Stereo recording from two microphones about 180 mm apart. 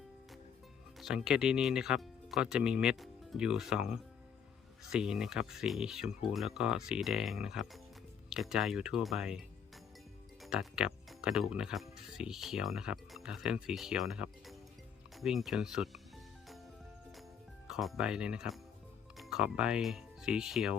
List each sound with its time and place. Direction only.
0.9 s speech: centre (ahead or behind)
10.4 s speech: centre (ahead or behind)
15.1 s music: centre (ahead or behind)
17.7 s speech: centre (ahead or behind)